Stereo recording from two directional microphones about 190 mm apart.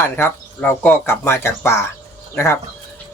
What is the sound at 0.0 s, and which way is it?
Speech, 10° left (ahead or behind).